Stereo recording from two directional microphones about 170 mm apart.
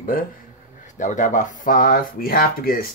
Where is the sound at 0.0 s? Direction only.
55° left (ahead or behind).